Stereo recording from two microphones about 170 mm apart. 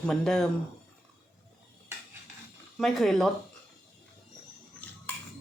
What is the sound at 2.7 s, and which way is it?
Speech, centre (ahead or behind).